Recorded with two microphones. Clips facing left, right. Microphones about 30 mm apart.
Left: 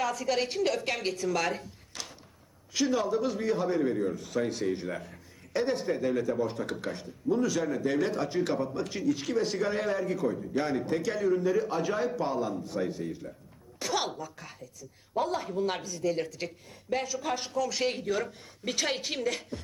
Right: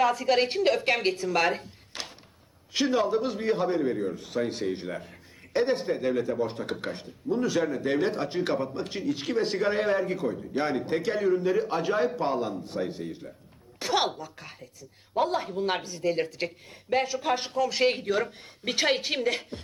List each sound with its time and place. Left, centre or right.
0.0 s a man's voice: right
4.6 s speech: centre
5.5 s a man's voice: right